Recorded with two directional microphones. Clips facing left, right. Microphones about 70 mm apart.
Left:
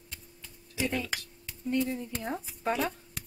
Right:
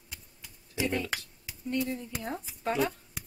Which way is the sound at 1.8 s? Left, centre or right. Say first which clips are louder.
Left 1 dB; centre.